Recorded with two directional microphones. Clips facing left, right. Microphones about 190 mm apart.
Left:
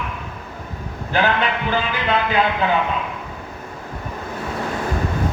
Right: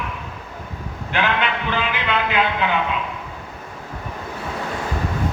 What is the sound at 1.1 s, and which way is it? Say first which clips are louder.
Speech: left 2 dB; 40° left (ahead or behind).